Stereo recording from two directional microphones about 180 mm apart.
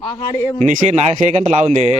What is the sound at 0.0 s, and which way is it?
Speech, 20° left (ahead or behind).